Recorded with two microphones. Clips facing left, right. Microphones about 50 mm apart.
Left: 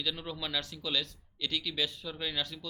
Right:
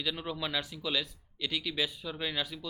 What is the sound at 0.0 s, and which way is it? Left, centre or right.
Speech, centre.